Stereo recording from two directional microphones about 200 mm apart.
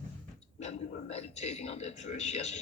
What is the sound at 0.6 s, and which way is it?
A man's voice, 35° left (ahead or behind).